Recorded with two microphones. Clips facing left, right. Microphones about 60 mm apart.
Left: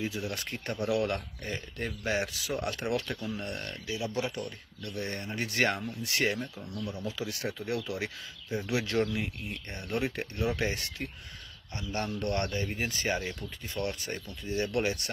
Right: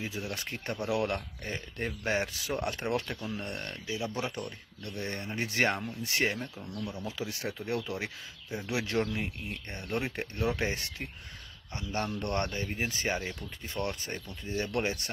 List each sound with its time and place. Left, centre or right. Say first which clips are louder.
0.1 s speech: left 1 dB; right
3.1 s speech: left 1 dB; centre
12.7 s speech: left 1 dB; centre
13.4 s speech: left 1 dB; right